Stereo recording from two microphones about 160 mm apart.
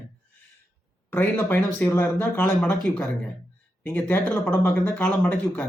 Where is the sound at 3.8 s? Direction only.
10° left (ahead or behind).